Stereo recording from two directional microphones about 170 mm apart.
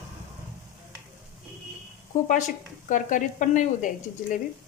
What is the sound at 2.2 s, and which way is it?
A woman's voice, 45° left (ahead or behind).